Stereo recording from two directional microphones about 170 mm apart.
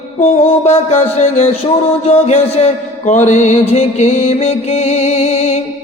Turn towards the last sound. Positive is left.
turn(degrees=40)  # may be behind; listen again after turning